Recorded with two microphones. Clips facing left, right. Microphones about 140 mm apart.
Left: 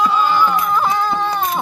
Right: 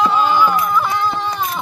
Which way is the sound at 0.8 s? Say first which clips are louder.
Left 1 dB; 45° left (ahead or behind).